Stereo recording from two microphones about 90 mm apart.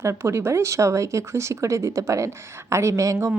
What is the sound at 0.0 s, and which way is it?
Speech, 30° right (ahead or behind).